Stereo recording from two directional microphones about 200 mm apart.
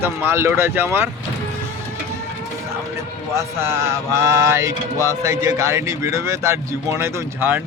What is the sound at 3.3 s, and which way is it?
Music, 15° right (ahead or behind).